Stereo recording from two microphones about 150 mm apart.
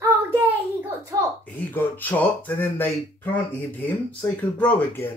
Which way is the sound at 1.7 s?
10° left (ahead or behind).